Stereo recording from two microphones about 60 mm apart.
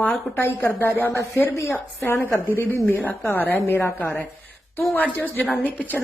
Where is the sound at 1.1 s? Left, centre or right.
Left.